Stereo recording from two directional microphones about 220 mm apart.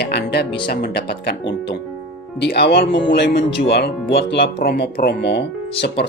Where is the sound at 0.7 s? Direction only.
50° left (ahead or behind).